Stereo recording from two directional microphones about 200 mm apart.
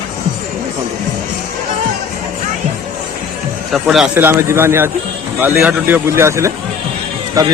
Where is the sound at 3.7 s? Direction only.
Centre (ahead or behind).